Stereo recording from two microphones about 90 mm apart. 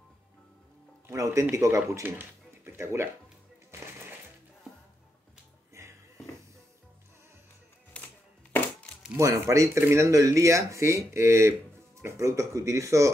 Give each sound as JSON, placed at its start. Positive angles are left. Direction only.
{"t": 1.0, "sound": "speech", "side_deg": -35}
{"t": 5.8, "sound": "music", "side_deg": -30}
{"t": 8.0, "sound": "music", "side_deg": 15}
{"t": 9.2, "sound": "speech", "side_deg": -35}